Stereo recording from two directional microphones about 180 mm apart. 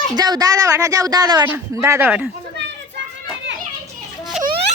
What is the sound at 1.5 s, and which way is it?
Speech, 10° right (ahead or behind).